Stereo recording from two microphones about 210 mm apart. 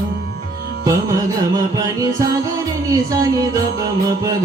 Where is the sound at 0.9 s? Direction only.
15° right (ahead or behind).